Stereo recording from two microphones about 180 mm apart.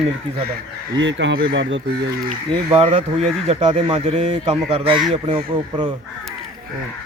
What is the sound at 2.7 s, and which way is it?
A man's voice, 30° right (ahead or behind).